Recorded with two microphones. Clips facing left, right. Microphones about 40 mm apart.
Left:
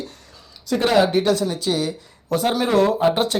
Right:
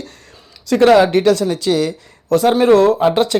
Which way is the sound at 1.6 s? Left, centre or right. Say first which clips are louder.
Right 6 dB; right.